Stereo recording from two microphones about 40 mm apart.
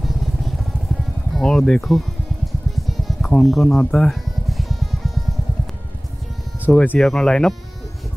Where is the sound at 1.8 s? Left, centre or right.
Centre.